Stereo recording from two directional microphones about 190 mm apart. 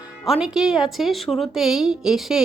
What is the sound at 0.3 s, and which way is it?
A woman's voice, 5° right (ahead or behind).